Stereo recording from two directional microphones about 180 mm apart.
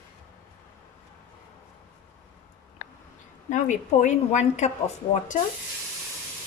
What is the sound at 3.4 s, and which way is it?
A woman's voice, 40° left (ahead or behind).